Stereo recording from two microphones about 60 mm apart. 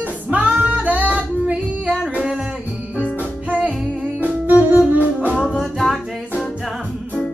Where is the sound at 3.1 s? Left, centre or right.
Right.